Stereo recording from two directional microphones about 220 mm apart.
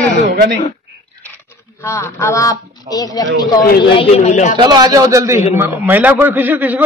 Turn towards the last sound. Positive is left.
turn(degrees=-10)  # may be behind; listen again after turning